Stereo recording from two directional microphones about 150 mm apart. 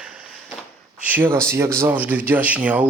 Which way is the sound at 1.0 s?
10° right (ahead or behind).